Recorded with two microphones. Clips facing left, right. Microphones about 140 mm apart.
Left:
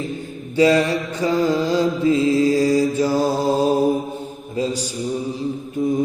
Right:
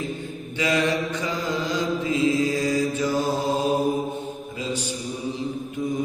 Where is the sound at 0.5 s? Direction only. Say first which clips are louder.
Left 7 dB; 35° left (ahead or behind).